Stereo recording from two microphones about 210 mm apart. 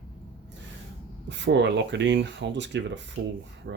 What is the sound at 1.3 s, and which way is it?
Speech, 55° right (ahead or behind).